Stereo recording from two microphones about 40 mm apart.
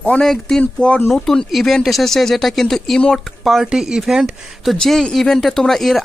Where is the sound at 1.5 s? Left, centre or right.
Centre.